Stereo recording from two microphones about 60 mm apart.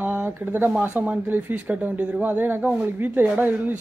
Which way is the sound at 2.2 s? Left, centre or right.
Right.